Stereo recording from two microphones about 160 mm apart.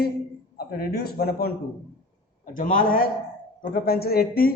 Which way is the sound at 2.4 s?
60° left (ahead or behind).